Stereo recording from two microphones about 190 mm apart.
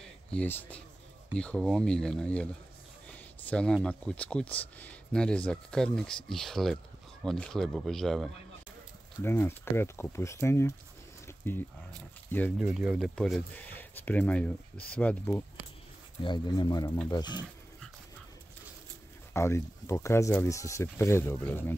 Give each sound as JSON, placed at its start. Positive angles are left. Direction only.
{"t": 0.3, "sound": "speech", "side_deg": 10}
{"t": 9.2, "sound": "speech", "side_deg": 10}
{"t": 11.2, "sound": "a sound", "side_deg": 10}
{"t": 12.3, "sound": "speech", "side_deg": 10}
{"t": 12.5, "sound": "speech", "side_deg": -5}
{"t": 16.2, "sound": "speech", "side_deg": 25}
{"t": 19.3, "sound": "speech", "side_deg": 15}